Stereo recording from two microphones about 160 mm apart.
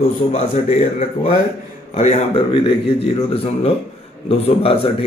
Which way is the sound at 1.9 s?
40° left (ahead or behind).